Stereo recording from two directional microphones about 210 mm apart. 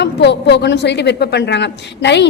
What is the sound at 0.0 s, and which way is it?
A woman's voice, 55° left (ahead or behind).